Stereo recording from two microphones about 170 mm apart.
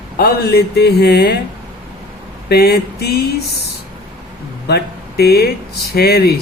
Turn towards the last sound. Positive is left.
turn(degrees=65)  # may be behind; listen again after turning